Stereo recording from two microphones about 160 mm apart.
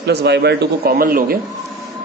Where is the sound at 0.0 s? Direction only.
90° right; by 1.4 s 65° right (ahead or behind).